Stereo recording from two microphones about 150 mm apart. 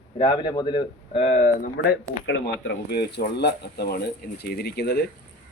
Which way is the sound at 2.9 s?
90° left.